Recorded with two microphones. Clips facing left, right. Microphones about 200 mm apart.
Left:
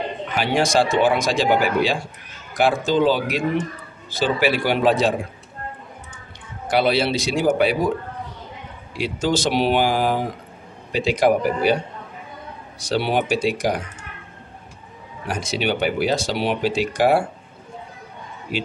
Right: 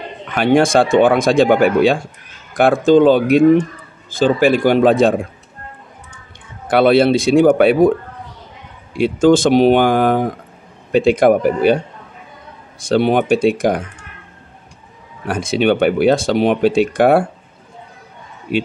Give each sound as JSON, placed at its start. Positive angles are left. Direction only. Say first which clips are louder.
{"t": 0.3, "sound": "speech", "louder": "right 8 dB", "side_deg": -55}
{"t": 6.7, "sound": "speech", "louder": "right 8 dB", "side_deg": -55}
{"t": 8.9, "sound": "speech", "louder": "right 10 dB", "side_deg": -50}
{"t": 15.2, "sound": "speech", "louder": "right 8 dB", "side_deg": -55}